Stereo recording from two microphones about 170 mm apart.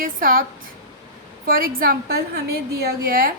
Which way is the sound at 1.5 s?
60° right (ahead or behind).